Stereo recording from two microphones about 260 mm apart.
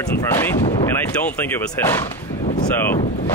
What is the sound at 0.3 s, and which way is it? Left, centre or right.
Speech, centre.